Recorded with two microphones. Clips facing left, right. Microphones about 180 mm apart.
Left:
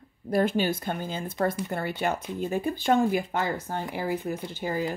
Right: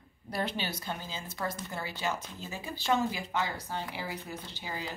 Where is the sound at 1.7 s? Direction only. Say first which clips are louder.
Left 7 dB; 55° left (ahead or behind).